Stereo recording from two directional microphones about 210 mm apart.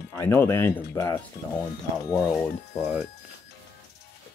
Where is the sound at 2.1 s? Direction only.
Centre (ahead or behind).